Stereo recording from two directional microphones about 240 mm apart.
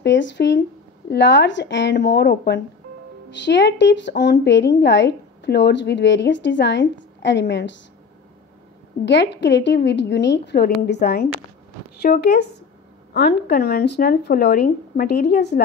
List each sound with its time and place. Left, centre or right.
0.0 s speech: left
9.0 s speech: left